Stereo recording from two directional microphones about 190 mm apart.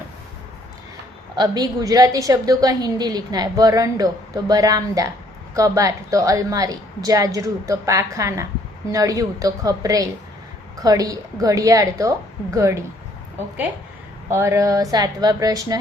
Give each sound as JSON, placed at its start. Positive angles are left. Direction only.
{"t": 1.4, "sound": "a woman's voice", "side_deg": -20}
{"t": 14.3, "sound": "a woman's voice", "side_deg": -15}